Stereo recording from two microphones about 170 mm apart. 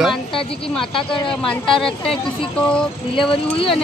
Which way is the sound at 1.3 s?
5° left (ahead or behind).